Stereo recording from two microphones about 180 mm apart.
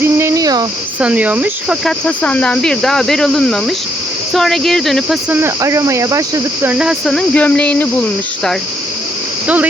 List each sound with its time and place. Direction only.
0.0 s a sound: 15° right (ahead or behind)
0.9 s speech: 5° right (ahead or behind)
2.0 s speech: 5° left (ahead or behind)
5.4 s speech: 15° right (ahead or behind); by 7.9 s 10° left (ahead or behind)